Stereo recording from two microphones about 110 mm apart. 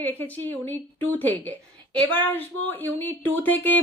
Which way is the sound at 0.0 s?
20° left (ahead or behind).